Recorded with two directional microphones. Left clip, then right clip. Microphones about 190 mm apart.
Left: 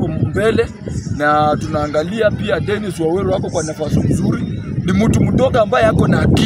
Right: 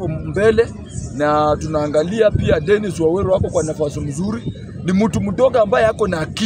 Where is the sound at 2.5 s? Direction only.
10° right (ahead or behind).